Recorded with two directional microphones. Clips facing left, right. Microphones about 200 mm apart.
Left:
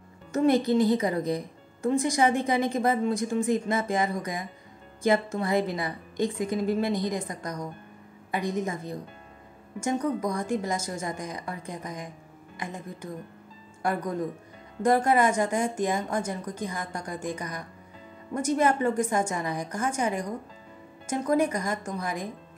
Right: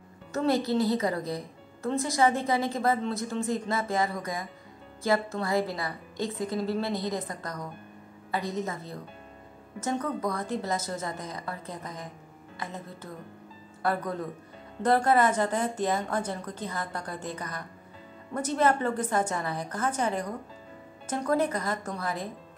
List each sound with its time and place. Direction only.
0.3 s a woman's voice: 15° left (ahead or behind)